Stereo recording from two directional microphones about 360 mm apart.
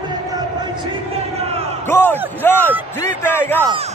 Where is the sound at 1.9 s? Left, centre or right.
Centre.